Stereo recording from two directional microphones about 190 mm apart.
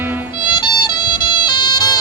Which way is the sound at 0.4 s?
25° left (ahead or behind).